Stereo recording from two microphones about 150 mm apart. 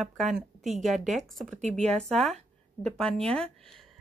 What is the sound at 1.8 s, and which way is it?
Speech, 45° right (ahead or behind).